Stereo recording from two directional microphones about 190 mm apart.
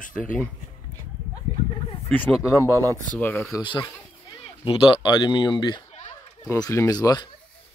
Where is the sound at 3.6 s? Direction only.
25° left (ahead or behind).